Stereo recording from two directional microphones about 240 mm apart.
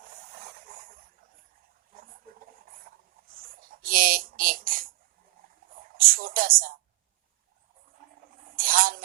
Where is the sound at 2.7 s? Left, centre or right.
Right.